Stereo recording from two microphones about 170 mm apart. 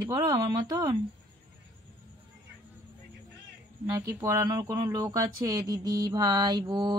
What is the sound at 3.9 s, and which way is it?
Speech, 15° right (ahead or behind).